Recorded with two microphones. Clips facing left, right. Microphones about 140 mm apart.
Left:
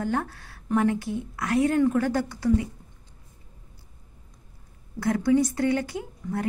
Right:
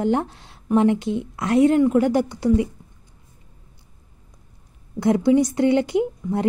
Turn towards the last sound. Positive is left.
turn(degrees=-20)  # may be behind; listen again after turning